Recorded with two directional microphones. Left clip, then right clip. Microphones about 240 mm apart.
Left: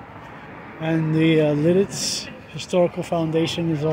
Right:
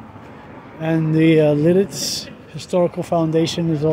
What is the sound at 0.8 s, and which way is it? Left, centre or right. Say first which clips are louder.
Speech: right 3 dB; centre.